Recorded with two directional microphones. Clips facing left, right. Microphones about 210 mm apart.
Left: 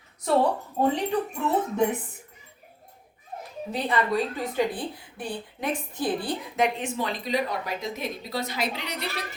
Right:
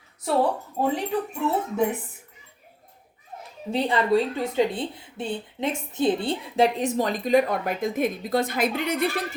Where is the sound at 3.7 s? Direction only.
30° right (ahead or behind); by 9.2 s 50° right (ahead or behind).